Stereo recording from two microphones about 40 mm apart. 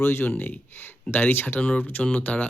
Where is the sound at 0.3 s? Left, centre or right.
Left.